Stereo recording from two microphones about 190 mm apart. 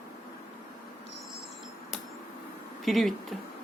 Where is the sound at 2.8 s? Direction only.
Centre (ahead or behind).